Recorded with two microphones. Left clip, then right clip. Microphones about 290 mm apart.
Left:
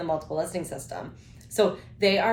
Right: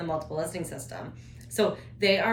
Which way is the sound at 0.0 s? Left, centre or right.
Centre.